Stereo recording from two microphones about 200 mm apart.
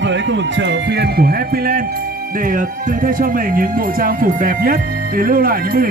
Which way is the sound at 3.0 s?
45° right (ahead or behind).